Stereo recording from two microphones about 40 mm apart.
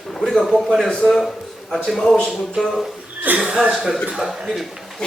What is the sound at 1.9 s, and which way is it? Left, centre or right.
Speech, centre.